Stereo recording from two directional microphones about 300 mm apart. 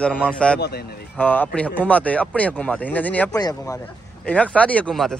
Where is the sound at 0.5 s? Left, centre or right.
Left.